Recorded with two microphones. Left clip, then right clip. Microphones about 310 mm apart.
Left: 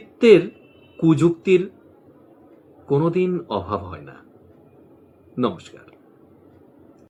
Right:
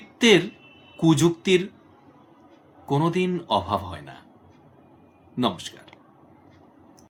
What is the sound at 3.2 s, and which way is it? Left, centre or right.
Speech, right.